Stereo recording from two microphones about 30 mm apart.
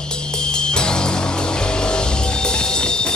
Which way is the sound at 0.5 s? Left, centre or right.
Left.